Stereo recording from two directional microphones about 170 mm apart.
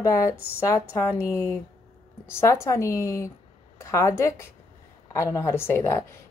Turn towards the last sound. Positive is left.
turn(degrees=15)  # may be behind; listen again after turning